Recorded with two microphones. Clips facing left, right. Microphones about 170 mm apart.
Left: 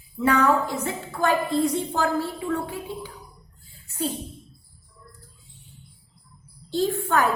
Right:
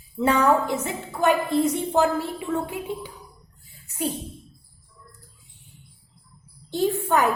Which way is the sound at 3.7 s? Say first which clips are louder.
Even; 15° right (ahead or behind).